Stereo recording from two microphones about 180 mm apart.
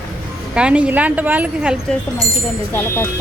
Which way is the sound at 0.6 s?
5° right (ahead or behind).